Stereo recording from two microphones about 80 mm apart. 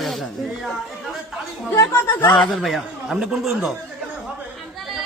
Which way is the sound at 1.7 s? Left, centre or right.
Left.